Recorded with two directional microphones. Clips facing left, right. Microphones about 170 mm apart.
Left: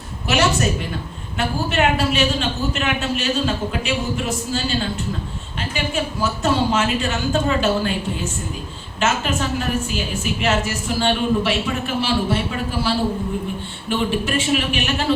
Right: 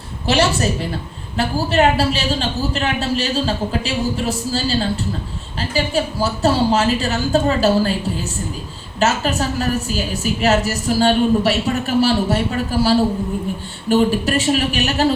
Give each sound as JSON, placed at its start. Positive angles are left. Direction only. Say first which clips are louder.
{"t": 0.3, "sound": "a woman's voice", "louder": "right 2 dB", "side_deg": -30}
{"t": 13.9, "sound": "a woman's voice", "louder": "right 5 dB", "side_deg": -40}